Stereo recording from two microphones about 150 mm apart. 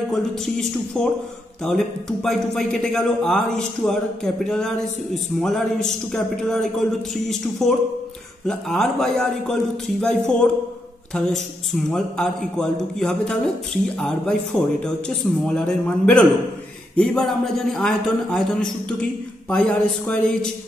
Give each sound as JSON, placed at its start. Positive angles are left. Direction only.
{"t": 0.1, "sound": "a man's voice", "side_deg": 5}
{"t": 20.1, "sound": "a man's voice", "side_deg": 5}